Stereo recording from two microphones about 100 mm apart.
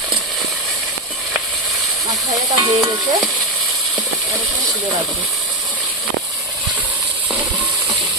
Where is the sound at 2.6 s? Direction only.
35° right (ahead or behind).